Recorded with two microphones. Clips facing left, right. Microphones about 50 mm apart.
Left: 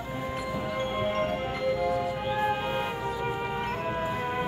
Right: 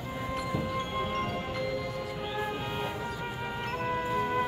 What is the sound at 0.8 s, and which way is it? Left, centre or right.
Music, left.